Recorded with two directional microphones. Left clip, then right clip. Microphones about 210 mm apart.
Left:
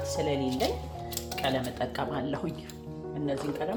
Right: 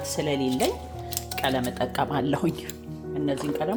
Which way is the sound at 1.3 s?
50° right (ahead or behind).